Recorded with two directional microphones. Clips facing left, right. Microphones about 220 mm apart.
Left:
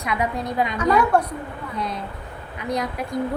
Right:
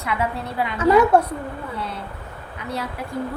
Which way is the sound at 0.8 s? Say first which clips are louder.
Right 5 dB; 25° right (ahead or behind).